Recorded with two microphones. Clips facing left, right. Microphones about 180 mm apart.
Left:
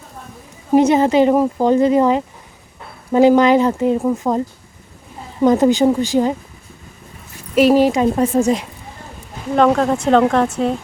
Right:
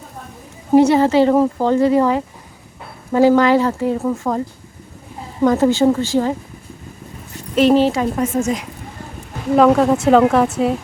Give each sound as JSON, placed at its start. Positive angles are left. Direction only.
{"t": 0.7, "sound": "a woman's voice", "side_deg": 20}
{"t": 5.4, "sound": "speech", "side_deg": 15}
{"t": 7.5, "sound": "speech", "side_deg": 10}
{"t": 8.1, "sound": "a woman's voice", "side_deg": 35}
{"t": 9.6, "sound": "speech", "side_deg": -5}